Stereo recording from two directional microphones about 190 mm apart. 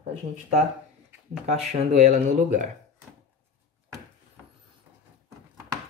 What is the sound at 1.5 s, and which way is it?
Speech, 35° right (ahead or behind).